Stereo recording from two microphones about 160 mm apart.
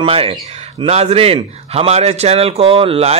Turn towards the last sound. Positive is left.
turn(degrees=-40)  # may be behind; listen again after turning